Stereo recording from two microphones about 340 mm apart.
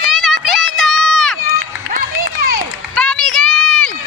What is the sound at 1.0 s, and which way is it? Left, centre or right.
Run, centre.